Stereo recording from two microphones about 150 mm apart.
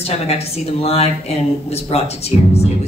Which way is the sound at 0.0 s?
45° left (ahead or behind).